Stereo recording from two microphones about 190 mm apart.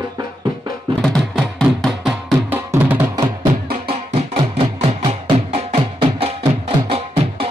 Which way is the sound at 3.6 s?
55° right (ahead or behind).